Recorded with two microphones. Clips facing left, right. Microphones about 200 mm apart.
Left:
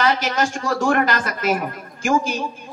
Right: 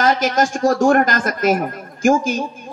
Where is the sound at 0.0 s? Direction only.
45° right (ahead or behind).